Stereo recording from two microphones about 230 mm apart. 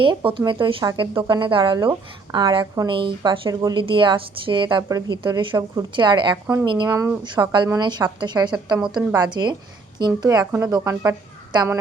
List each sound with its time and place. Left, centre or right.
0.0 s speech: right
6.3 s a woman's voice: centre